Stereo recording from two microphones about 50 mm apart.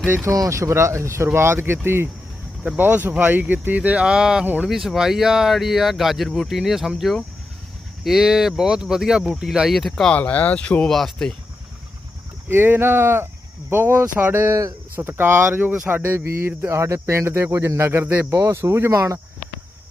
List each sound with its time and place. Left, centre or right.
0.3 s speech: right
2.7 s speech: right; by 10.1 s centre
10.2 s speech: left
10.8 s speech: centre
12.5 s speech: right
18.0 s speech: right
18.3 s speech: right